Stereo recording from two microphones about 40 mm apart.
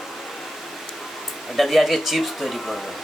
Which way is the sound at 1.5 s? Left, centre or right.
Centre.